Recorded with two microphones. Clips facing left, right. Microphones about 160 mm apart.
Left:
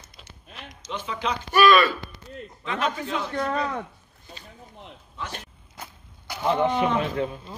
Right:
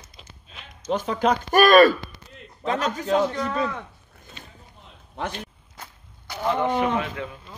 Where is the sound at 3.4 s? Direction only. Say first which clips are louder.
Even; 45° left (ahead or behind).